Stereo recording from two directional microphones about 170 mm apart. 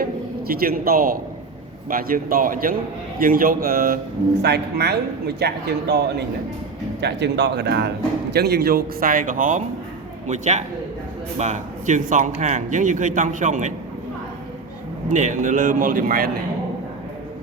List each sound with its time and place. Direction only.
0.0 s a man's voice: 60° right (ahead or behind)
4.4 s speech: 75° right (ahead or behind)
7.0 s speech: 90° right; by 13.7 s 45° right (ahead or behind)
15.1 s speech: 45° right (ahead or behind)